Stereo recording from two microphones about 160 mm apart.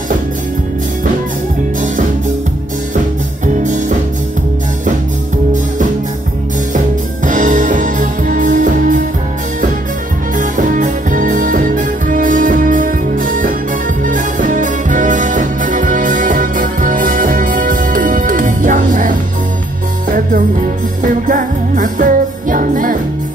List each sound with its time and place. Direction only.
7.2 s music: 55° right (ahead or behind)
10.3 s music: 55° right (ahead or behind)